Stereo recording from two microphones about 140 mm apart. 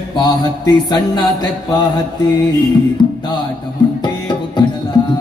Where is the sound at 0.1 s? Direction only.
30° left (ahead or behind).